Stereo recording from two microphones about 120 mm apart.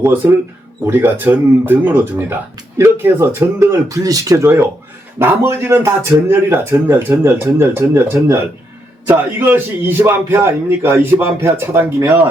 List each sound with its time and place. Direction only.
0.0 s a man's voice: 20° right (ahead or behind)